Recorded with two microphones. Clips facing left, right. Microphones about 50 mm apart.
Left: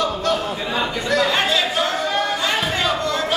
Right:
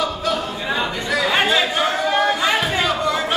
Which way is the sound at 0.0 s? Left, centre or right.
Centre.